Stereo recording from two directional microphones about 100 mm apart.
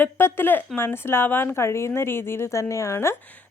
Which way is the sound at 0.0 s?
20° left (ahead or behind).